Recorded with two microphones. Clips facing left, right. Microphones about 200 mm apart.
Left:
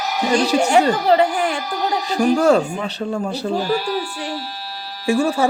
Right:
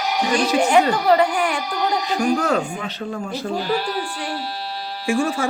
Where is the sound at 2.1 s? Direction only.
40° left (ahead or behind).